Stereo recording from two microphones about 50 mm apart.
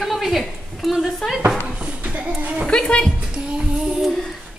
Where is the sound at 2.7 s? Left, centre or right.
Centre.